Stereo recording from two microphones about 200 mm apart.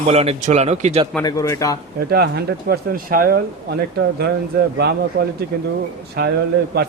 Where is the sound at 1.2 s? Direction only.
15° left (ahead or behind).